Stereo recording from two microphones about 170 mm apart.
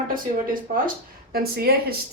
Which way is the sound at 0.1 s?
55° right (ahead or behind).